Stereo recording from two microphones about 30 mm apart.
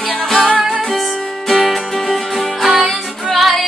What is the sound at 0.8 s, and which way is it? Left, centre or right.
Music, centre.